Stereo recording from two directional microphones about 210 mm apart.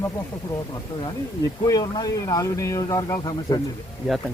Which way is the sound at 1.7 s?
20° left (ahead or behind).